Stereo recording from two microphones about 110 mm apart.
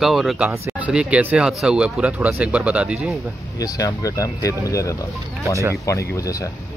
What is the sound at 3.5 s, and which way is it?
Speech, 35° left (ahead or behind).